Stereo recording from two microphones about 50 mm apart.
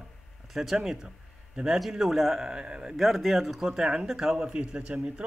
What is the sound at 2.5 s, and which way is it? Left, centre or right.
Speech, centre.